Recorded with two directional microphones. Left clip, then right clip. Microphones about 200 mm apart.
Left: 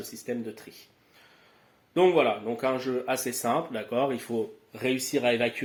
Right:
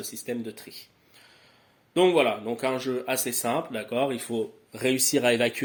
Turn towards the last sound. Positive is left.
turn(degrees=-55)  # may be behind; listen again after turning